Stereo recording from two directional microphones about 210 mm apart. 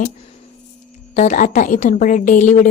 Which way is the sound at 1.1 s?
35° left (ahead or behind).